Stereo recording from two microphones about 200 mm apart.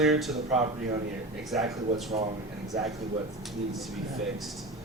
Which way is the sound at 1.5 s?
Centre (ahead or behind).